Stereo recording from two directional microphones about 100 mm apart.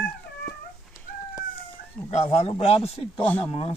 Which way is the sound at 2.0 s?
90° left.